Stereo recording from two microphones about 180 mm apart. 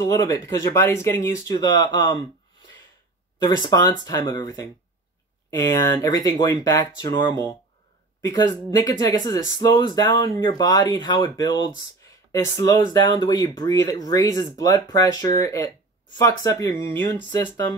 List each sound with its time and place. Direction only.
0.0 s speech: 15° left (ahead or behind)
3.6 s speech: 20° left (ahead or behind)